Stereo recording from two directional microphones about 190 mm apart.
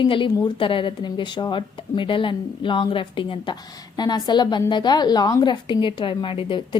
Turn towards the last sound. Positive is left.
turn(degrees=25)  # may be behind; listen again after turning